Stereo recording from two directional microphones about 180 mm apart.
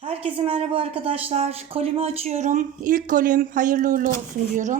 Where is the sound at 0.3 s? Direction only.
30° right (ahead or behind).